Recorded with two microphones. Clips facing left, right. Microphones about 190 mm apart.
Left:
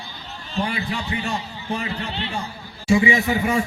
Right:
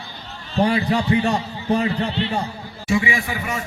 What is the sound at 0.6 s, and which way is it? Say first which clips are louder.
Speech: right 8 dB; 45° right (ahead or behind).